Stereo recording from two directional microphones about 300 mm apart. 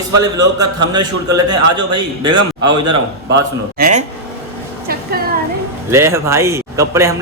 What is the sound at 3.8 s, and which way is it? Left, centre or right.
Speech, right.